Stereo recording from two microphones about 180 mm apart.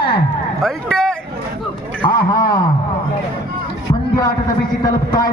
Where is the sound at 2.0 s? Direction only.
25° left (ahead or behind).